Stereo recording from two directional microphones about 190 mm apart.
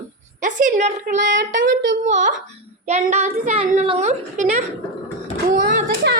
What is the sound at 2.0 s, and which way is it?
A child's voice, 40° right (ahead or behind).